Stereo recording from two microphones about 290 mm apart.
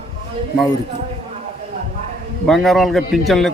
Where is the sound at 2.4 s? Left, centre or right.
Centre.